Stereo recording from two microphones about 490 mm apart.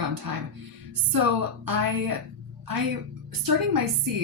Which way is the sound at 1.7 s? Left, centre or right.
Right.